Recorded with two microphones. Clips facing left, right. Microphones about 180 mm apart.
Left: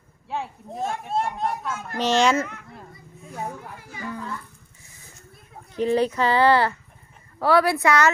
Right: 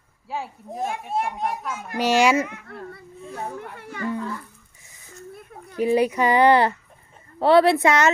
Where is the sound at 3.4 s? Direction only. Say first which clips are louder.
Even; 5° left (ahead or behind).